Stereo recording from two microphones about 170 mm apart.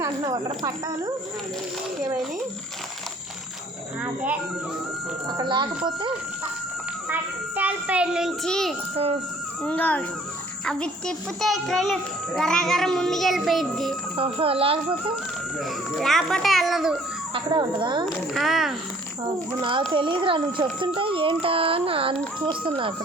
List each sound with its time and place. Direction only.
0.0 s speech: 20° right (ahead or behind)
4.0 s speech: 10° right (ahead or behind)
5.4 s speech: 25° right (ahead or behind)
7.1 s a child's voice: 10° right (ahead or behind)
14.2 s a child's voice: 35° right (ahead or behind)
15.5 s a child's voice: centre (ahead or behind)
17.3 s speech: 30° right (ahead or behind)
18.0 s a child's voice: centre (ahead or behind)
19.9 s a child's voice: 30° right (ahead or behind)